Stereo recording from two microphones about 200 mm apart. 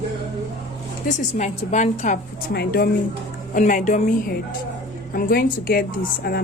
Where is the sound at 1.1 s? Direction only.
40° left (ahead or behind).